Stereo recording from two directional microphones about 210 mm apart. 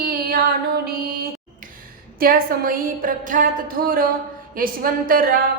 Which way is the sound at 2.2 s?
45° right (ahead or behind).